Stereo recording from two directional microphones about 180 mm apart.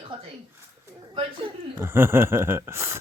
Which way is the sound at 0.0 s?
30° right (ahead or behind).